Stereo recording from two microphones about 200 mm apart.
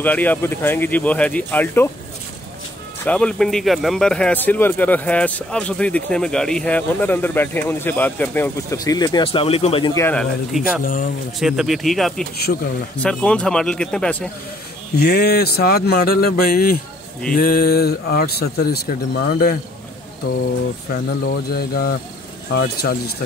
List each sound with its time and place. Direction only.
0.0 s speech: 10° left (ahead or behind)
3.1 s speech: 5° left (ahead or behind); by 9.9 s 30° left (ahead or behind)
9.9 s speech: 10° left (ahead or behind)
10.8 s speech: 45° left (ahead or behind)
11.3 s speech: centre (ahead or behind)
12.5 s speech: 50° left (ahead or behind)
13.0 s speech: 5° left (ahead or behind)
15.0 s speech: 55° left (ahead or behind)
20.9 s speech: 45° left (ahead or behind)